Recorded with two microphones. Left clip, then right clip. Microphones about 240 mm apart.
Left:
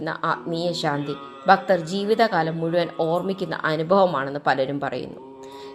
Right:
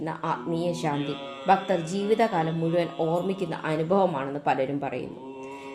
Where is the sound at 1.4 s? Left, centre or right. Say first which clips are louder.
Left 5 dB; centre.